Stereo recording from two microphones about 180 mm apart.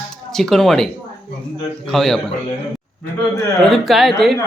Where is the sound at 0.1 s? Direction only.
5° left (ahead or behind).